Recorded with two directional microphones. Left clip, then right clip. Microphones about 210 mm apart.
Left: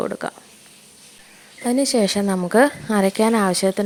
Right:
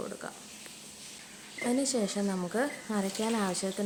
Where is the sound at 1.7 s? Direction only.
35° left (ahead or behind).